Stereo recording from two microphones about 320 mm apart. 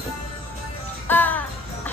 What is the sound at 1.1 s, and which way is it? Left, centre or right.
Music, centre.